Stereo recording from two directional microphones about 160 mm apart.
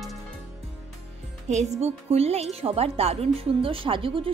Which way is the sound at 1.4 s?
45° right (ahead or behind).